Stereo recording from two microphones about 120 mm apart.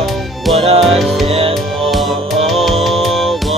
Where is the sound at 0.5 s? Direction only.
55° right (ahead or behind).